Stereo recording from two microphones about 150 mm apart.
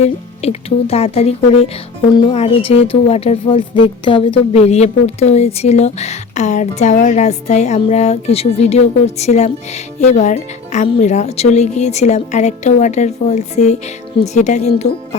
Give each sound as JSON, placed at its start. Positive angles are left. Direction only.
{"t": 0.0, "sound": "speech", "side_deg": 45}